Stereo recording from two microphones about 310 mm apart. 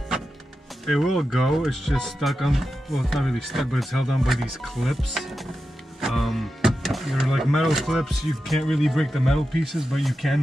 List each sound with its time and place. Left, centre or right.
0.8 s speech: centre